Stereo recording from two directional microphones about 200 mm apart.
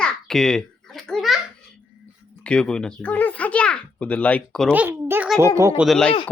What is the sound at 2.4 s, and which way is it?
A child's voice, 5° left (ahead or behind).